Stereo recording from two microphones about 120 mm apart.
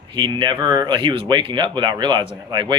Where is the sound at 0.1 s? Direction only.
40° right (ahead or behind).